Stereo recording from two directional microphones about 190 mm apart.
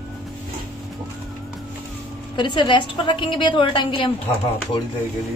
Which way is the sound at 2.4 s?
25° left (ahead or behind).